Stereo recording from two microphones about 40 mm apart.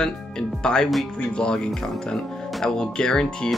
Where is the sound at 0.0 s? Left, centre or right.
Centre.